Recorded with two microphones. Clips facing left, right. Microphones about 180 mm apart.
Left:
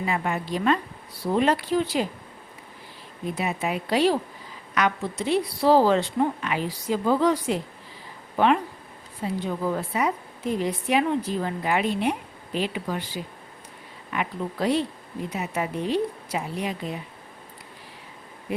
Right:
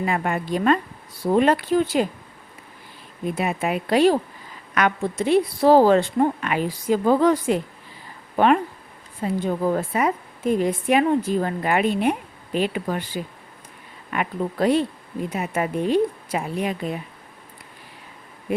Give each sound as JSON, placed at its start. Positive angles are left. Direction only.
{"t": 0.0, "sound": "a woman's voice", "side_deg": -55}
{"t": 3.3, "sound": "a woman's voice", "side_deg": -55}
{"t": 14.1, "sound": "a woman's voice", "side_deg": -55}